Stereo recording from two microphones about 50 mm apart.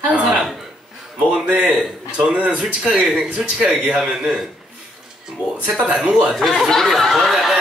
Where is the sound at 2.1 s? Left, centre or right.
Right.